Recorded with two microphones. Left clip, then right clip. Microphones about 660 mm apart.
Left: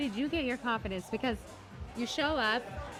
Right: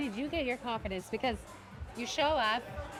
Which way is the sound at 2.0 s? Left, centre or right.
Right.